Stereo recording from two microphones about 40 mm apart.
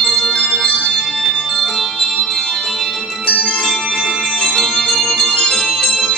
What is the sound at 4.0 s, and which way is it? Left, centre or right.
Music, centre.